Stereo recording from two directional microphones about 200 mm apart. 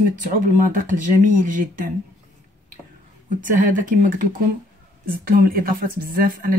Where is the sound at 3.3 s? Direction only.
40° right (ahead or behind).